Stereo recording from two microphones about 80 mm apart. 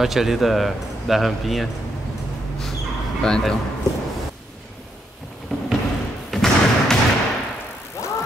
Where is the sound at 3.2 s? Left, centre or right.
Centre.